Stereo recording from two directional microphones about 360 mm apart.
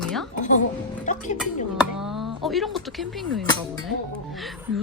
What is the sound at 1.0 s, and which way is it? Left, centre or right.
Music, left.